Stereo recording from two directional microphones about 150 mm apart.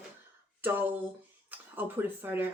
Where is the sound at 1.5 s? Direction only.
15° right (ahead or behind).